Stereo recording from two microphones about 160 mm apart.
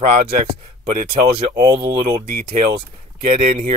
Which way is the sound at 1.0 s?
75° right (ahead or behind).